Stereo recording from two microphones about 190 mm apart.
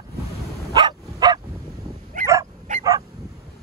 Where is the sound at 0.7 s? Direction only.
20° right (ahead or behind).